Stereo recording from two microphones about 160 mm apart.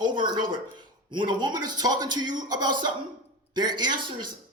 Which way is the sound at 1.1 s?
25° right (ahead or behind).